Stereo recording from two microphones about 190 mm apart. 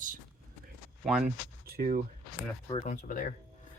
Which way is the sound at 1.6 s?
50° right (ahead or behind).